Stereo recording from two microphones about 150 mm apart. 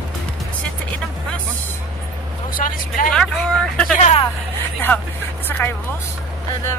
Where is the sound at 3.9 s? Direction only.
50° left (ahead or behind).